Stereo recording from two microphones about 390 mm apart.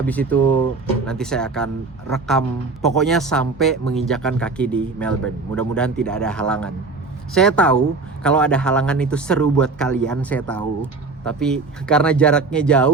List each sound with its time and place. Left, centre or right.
0.0 s speech: centre